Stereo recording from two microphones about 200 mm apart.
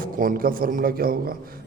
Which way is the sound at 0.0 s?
45° right (ahead or behind).